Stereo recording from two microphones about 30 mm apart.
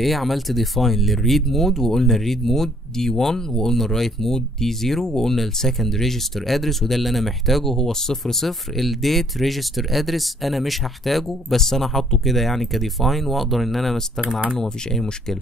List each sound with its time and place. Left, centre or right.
0.0 s speech: centre
7.7 s speech: centre
14.6 s speech: centre